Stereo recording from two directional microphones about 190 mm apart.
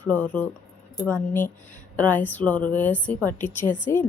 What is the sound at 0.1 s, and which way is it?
A woman's voice, 10° left (ahead or behind).